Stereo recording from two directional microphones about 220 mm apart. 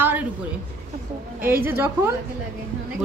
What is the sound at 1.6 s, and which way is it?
Speech, 10° right (ahead or behind).